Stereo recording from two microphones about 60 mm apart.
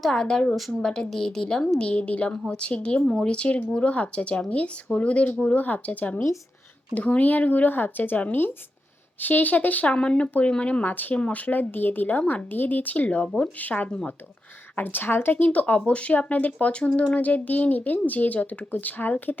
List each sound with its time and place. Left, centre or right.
0.1 s a woman's voice: centre
9.9 s speech: centre
14.8 s speech: left